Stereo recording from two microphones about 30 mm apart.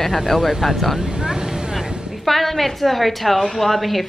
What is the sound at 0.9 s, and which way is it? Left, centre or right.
Vehicle, right.